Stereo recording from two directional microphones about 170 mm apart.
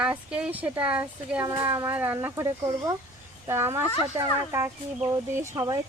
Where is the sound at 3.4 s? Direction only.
15° right (ahead or behind).